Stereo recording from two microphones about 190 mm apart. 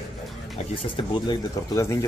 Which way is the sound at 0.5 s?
25° left (ahead or behind).